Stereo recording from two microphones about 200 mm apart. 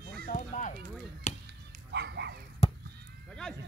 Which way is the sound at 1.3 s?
35° left (ahead or behind).